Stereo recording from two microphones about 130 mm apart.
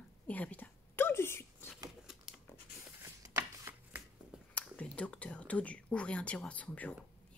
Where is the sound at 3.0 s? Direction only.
20° right (ahead or behind).